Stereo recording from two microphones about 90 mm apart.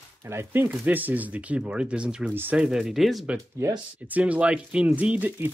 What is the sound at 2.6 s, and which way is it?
Speech, 5° right (ahead or behind).